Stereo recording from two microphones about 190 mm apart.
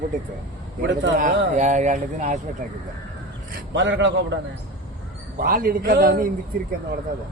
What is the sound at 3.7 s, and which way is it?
Speech, 70° right (ahead or behind).